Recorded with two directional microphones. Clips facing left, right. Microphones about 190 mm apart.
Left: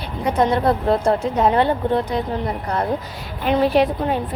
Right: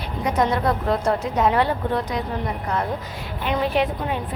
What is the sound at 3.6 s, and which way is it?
Speech, 40° left (ahead or behind).